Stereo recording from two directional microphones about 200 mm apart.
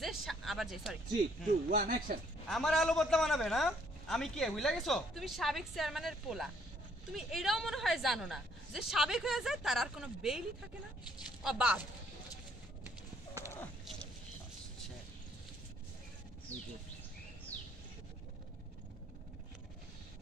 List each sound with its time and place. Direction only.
0.0 s music: centre (ahead or behind)
1.7 s speech: 45° right (ahead or behind)
2.4 s a man's voice: centre (ahead or behind)
11.4 s speech: 5° right (ahead or behind)
13.4 s a sound: 15° left (ahead or behind)
17.5 s a sound: 10° left (ahead or behind)